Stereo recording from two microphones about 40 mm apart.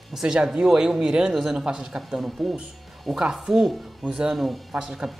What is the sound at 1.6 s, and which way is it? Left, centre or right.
Speech, right.